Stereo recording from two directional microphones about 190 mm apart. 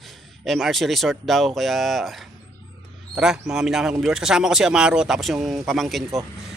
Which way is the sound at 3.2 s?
5° right (ahead or behind).